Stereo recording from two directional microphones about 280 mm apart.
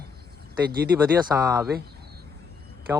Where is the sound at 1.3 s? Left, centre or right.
Centre.